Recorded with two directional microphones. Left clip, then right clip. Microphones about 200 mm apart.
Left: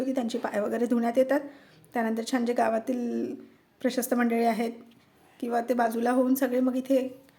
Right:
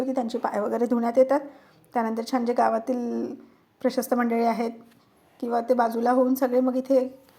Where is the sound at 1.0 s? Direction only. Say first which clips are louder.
Right 5 dB; 20° left (ahead or behind).